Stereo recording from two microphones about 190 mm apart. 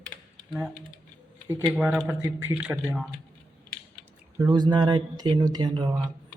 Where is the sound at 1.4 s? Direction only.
15° right (ahead or behind).